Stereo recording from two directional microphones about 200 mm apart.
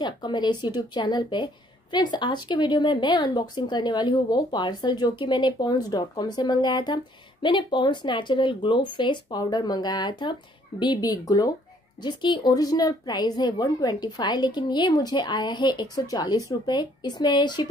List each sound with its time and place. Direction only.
0.0 s speech: 20° left (ahead or behind)